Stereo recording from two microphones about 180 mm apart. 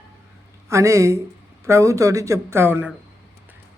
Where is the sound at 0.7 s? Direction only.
15° right (ahead or behind).